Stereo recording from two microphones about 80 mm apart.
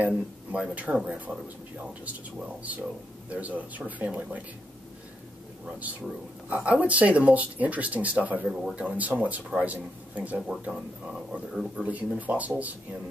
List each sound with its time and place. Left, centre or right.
0.0 s speech: centre
6.5 s speech: centre